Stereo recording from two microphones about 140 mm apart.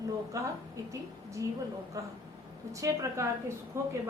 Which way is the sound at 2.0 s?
25° right (ahead or behind).